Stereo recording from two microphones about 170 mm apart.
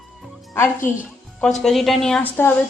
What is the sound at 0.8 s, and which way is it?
Speech, 50° left (ahead or behind).